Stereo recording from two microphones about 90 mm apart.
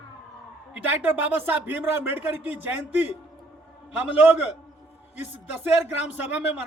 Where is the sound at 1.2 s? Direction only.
20° right (ahead or behind).